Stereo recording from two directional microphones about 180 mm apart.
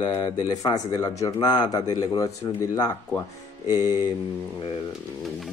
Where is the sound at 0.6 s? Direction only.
20° left (ahead or behind).